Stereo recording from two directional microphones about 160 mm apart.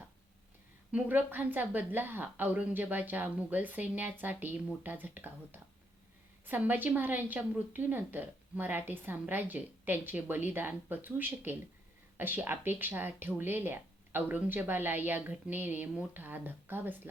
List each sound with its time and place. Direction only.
0.9 s a woman's voice: 10° right (ahead or behind)